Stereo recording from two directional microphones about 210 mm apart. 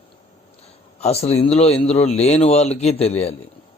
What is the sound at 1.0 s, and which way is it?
A man's voice, 30° left (ahead or behind).